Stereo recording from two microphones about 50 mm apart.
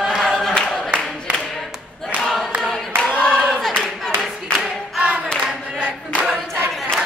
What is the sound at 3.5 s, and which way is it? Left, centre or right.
Clapping, centre.